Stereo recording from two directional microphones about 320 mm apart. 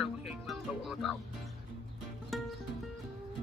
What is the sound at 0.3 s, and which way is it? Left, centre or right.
Music, centre.